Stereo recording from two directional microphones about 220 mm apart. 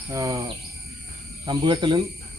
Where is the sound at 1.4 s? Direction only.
20° right (ahead or behind).